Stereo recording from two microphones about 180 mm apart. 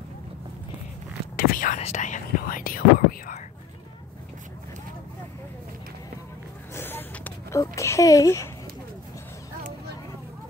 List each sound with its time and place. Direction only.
1.3 s whispering: 55° left (ahead or behind)
1.8 s whispering: 40° left (ahead or behind)
6.7 s a sound: 10° left (ahead or behind)